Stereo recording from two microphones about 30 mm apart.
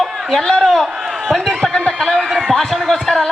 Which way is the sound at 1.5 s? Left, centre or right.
Centre.